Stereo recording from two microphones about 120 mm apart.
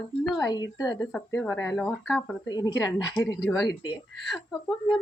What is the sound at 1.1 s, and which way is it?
Speech, 20° left (ahead or behind).